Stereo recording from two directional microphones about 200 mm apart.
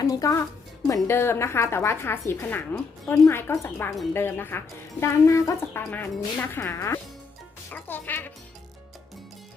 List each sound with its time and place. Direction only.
0.0 s speech: 15° left (ahead or behind)